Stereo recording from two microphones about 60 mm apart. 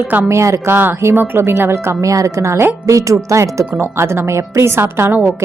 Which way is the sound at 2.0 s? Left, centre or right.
Right.